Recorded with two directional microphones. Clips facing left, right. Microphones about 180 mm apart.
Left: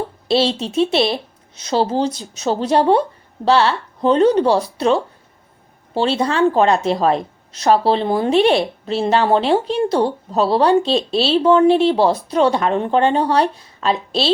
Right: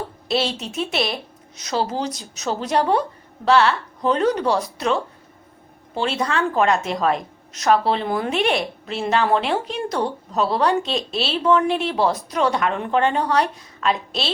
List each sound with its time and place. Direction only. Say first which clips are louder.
0.3 s a woman's voice: left 6 dB; 30° left (ahead or behind)